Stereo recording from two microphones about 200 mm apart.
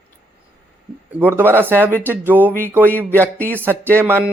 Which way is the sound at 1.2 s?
10° right (ahead or behind).